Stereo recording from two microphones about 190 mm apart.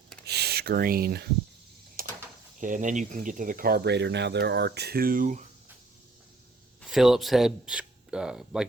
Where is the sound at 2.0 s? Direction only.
45° right (ahead or behind).